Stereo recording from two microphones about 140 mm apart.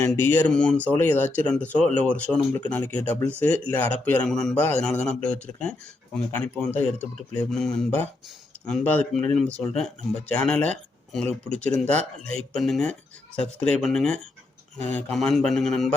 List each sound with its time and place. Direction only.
0.0 s speech: 15° left (ahead or behind)
12.3 s speech: 5° left (ahead or behind)